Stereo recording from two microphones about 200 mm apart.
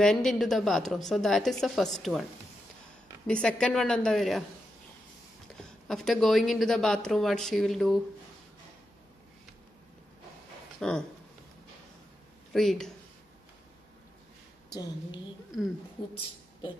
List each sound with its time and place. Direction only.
0.0 s speech: centre (ahead or behind)
3.3 s speech: 5° left (ahead or behind)
5.5 s speech: centre (ahead or behind)
10.8 s speech: 5° left (ahead or behind)
12.5 s speech: centre (ahead or behind)
14.7 s speech: 20° left (ahead or behind)